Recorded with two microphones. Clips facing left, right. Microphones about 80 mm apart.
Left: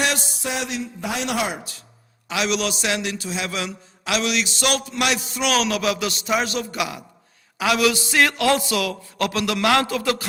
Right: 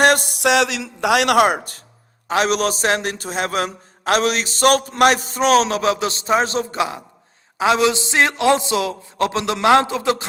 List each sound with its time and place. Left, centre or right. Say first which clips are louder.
0.0 s speech: right 9 dB; right
2.2 s a man's voice: right 5 dB; right